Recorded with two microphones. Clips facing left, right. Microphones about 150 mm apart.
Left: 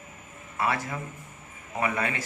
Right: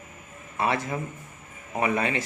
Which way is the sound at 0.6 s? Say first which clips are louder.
Right 2 dB; 25° right (ahead or behind).